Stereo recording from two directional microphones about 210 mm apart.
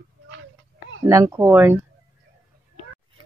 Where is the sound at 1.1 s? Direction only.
15° right (ahead or behind).